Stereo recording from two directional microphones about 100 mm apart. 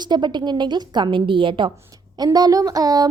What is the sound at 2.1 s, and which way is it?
Speech, 40° right (ahead or behind).